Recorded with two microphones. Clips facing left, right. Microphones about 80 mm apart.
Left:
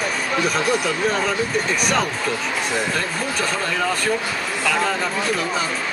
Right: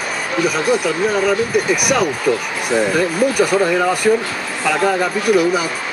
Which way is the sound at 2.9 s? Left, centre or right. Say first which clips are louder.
Right 9 dB; centre.